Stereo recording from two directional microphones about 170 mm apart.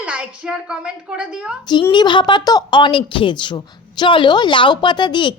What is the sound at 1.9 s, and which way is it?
A woman's voice, 25° left (ahead or behind).